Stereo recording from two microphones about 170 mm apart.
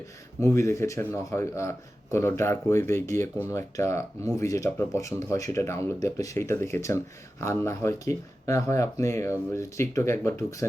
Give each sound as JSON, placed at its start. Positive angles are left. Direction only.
{"t": 0.3, "sound": "speech", "side_deg": 15}